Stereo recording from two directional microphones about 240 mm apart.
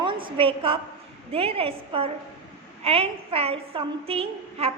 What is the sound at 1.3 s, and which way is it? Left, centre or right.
A woman's voice, right.